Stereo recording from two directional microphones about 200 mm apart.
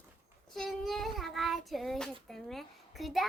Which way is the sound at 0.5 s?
Centre (ahead or behind).